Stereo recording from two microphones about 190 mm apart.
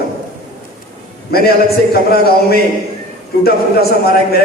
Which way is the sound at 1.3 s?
55° left (ahead or behind).